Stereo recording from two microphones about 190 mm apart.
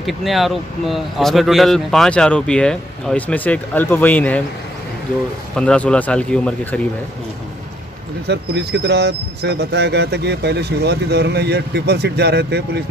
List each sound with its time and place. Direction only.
0.0 s speech: centre (ahead or behind)
5.6 s speech: 5° left (ahead or behind)
8.3 s speech: 65° right (ahead or behind)